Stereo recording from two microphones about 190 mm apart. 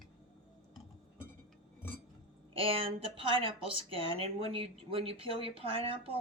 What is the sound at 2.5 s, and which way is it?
Speech, 30° right (ahead or behind).